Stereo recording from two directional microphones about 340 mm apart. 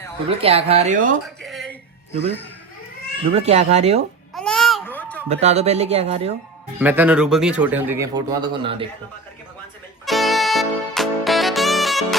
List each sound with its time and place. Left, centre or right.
0.3 s speech: centre
1.4 s a sound: centre
3.3 s speech: centre
4.4 s a sound: centre
5.3 s speech: centre
6.7 s a man's voice: centre
10.1 s music: centre